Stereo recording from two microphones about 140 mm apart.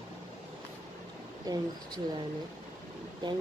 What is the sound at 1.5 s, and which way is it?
Speech, 25° right (ahead or behind).